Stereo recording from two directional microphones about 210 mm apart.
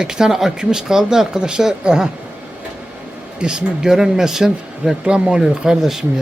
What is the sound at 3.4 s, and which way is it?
Speech, 5° right (ahead or behind).